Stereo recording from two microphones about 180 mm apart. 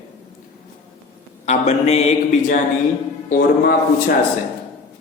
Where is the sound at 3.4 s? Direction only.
60° left (ahead or behind).